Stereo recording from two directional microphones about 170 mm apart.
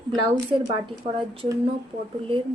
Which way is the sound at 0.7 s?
30° right (ahead or behind).